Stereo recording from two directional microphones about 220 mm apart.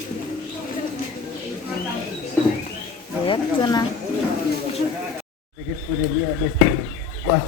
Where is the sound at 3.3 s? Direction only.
20° left (ahead or behind).